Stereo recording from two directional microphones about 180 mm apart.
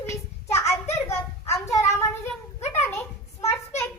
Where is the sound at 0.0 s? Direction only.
15° left (ahead or behind).